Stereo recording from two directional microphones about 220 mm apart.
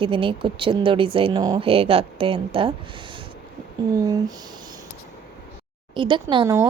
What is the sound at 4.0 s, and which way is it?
Speech, 15° right (ahead or behind).